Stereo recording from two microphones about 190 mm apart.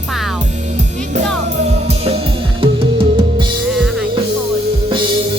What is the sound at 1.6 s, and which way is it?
Music, 35° right (ahead or behind).